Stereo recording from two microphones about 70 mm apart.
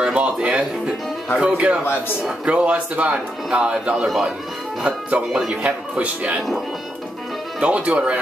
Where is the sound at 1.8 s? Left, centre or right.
Left.